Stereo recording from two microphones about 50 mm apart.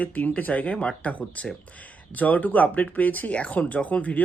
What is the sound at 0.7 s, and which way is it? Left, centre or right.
Speech, centre.